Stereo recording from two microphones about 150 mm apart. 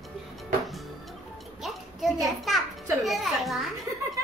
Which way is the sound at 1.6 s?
Centre (ahead or behind).